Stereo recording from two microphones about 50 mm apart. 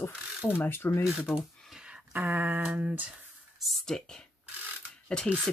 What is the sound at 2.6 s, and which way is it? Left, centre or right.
Speech, right.